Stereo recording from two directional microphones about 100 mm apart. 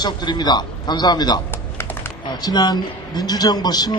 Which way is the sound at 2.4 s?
45° left (ahead or behind).